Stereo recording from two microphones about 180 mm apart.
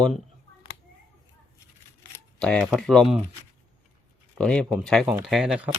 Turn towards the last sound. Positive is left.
turn(degrees=-5)  # may be behind; listen again after turning